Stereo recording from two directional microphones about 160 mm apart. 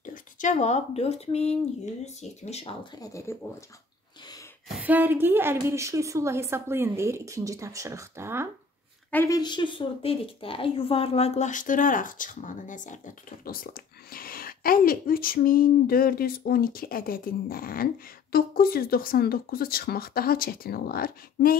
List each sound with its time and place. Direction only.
0.0 s speech: 55° left (ahead or behind); by 3.3 s 20° left (ahead or behind)
4.6 s a woman's voice: 10° right (ahead or behind)
9.1 s a woman's voice: 20° left (ahead or behind); by 21.5 s 65° left (ahead or behind)